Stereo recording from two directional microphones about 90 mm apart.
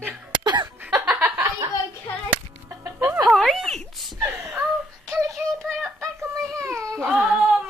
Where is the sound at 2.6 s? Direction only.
30° right (ahead or behind).